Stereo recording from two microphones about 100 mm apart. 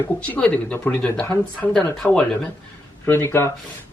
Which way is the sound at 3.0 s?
25° left (ahead or behind).